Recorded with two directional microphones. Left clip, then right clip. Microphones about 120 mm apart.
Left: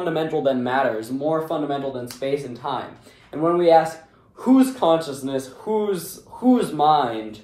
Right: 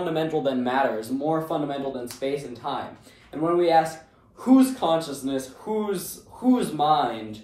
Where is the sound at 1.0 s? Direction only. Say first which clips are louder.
Left 3 dB; 15° right (ahead or behind).